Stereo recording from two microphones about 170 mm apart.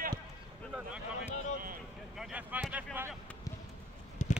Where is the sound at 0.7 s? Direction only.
5° right (ahead or behind).